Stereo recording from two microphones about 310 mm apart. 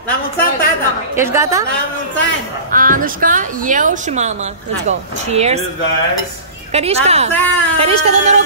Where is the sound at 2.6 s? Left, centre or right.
Right.